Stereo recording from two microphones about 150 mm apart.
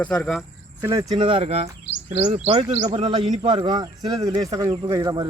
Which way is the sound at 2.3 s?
30° right (ahead or behind).